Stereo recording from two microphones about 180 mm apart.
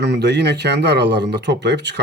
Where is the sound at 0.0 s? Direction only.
70° right (ahead or behind).